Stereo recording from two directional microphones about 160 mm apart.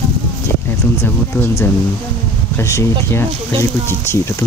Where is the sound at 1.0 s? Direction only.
15° left (ahead or behind).